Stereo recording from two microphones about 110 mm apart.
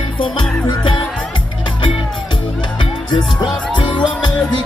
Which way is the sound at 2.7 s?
45° left (ahead or behind).